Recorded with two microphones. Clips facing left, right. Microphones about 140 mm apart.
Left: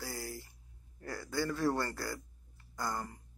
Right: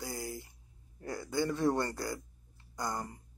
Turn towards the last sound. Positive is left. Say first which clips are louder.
# right 1 dB
turn(degrees=-20)  # may be behind; listen again after turning